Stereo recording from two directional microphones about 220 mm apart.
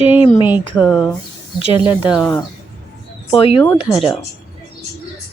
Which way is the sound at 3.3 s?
25° left (ahead or behind).